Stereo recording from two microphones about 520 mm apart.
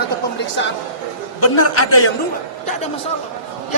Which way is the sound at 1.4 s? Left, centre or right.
Left.